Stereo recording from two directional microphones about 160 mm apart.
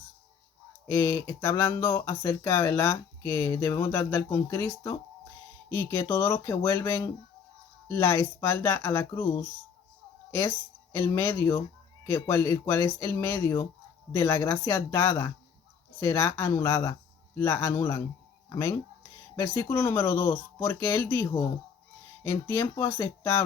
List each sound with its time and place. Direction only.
0.9 s speech: 15° left (ahead or behind)
10.9 s speech: 15° left (ahead or behind)